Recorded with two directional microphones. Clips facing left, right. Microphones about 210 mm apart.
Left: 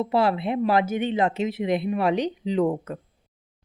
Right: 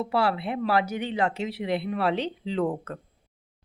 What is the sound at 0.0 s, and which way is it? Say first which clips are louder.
Speech: left 3 dB; 20° left (ahead or behind).